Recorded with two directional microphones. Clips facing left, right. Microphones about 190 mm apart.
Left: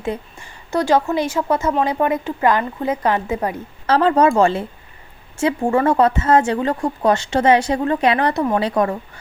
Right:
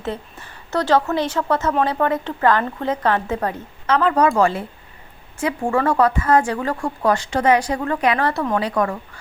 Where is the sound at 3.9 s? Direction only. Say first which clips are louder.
Left 3 dB; 30° left (ahead or behind).